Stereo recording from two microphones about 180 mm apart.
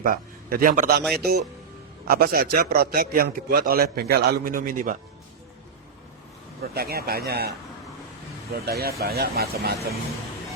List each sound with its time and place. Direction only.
0.0 s a man's voice: 50° right (ahead or behind)
6.6 s a man's voice: 60° right (ahead or behind)
8.6 s a man's voice: 60° right (ahead or behind)